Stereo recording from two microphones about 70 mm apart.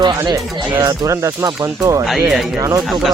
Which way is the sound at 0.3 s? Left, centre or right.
Right.